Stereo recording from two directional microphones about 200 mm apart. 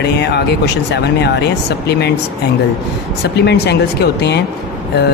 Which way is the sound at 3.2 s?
55° left (ahead or behind).